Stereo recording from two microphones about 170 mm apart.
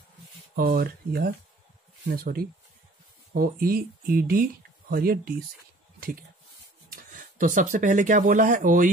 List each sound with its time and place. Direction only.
0.6 s speech: 60° right (ahead or behind)